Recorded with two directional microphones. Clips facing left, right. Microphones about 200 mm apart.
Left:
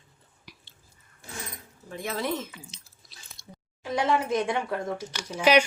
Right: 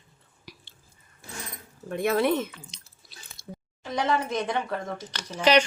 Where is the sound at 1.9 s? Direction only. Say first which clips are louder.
Right 7 dB; 60° right (ahead or behind).